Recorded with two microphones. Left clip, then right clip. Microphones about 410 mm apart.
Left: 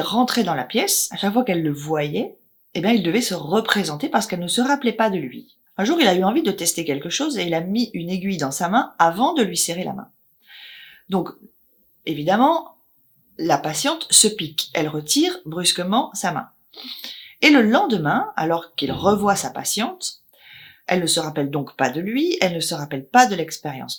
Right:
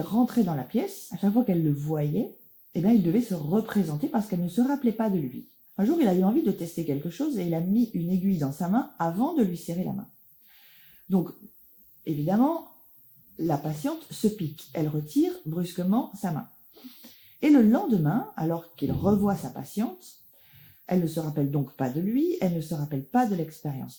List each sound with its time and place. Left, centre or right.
0.0 s speech: centre
7.6 s speech: left
8.4 s speech: centre
11.1 s speech: centre